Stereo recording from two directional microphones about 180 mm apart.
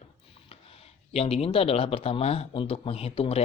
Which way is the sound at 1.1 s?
35° left (ahead or behind).